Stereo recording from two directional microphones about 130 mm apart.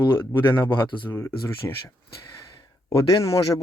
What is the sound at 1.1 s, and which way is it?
Speech, 20° left (ahead or behind).